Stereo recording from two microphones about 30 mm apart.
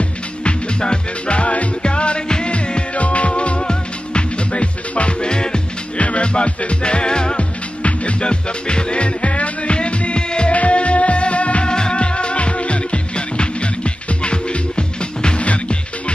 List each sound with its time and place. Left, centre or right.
0.4 s music: left
1.8 s music: left
2.5 s music: left
5.9 s music: left
7.8 s music: left
10.5 s music: left
11.6 s music: left
15.4 s music: left